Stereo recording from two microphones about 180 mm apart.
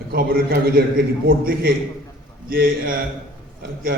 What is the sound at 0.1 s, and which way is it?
Speech, 55° right (ahead or behind).